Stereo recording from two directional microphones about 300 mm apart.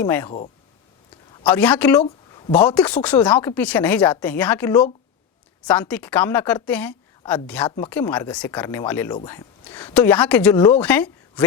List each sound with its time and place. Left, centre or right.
0.0 s speech: centre
0.3 s speech: left
1.5 s a woman's voice: centre